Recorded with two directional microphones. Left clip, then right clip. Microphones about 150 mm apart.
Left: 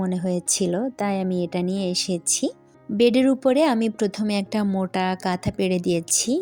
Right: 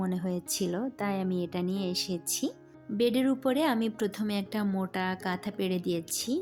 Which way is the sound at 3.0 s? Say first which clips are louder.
Left 9 dB; 55° left (ahead or behind).